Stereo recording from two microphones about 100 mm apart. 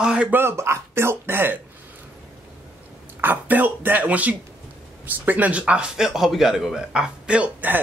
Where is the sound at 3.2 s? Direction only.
20° right (ahead or behind).